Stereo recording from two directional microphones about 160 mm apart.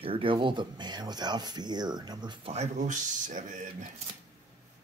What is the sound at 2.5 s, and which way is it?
Speech, 45° right (ahead or behind).